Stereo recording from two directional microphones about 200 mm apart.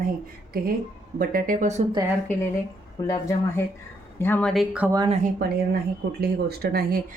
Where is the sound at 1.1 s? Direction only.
45° right (ahead or behind).